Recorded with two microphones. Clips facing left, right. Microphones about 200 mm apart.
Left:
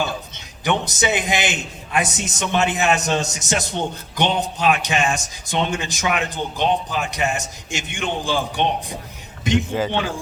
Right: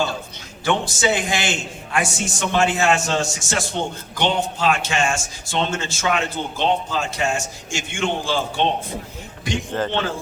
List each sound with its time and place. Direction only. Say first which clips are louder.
0.6 s a man's voice: right 1 dB; 20° left (ahead or behind)
9.7 s a man's voice: left 1 dB; 10° left (ahead or behind)